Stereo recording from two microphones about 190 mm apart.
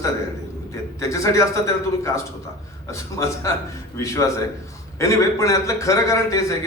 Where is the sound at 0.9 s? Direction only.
15° left (ahead or behind).